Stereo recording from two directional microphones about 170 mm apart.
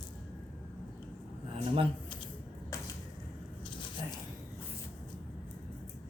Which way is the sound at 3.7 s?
30° left (ahead or behind).